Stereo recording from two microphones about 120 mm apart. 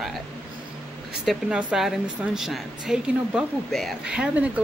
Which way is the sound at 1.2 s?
5° right (ahead or behind).